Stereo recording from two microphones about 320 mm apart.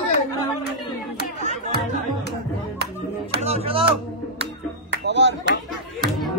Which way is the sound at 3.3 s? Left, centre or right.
Centre.